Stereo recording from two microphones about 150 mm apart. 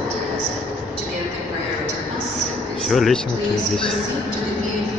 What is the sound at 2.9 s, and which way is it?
Speech, centre (ahead or behind).